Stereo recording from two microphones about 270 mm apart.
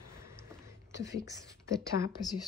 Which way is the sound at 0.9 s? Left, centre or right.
Left.